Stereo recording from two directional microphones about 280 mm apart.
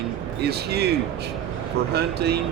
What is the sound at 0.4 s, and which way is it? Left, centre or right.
Speech, right.